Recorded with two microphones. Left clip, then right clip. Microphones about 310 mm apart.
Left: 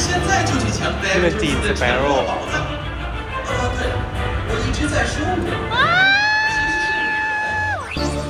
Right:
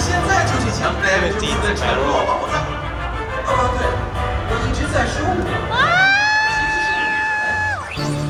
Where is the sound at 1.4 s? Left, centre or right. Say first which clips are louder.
Even; left.